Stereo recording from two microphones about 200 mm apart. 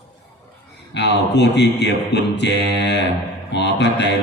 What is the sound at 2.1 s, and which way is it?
Mantra, 60° left (ahead or behind).